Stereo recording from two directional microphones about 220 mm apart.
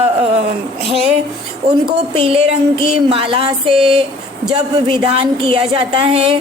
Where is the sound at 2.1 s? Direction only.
25° right (ahead or behind).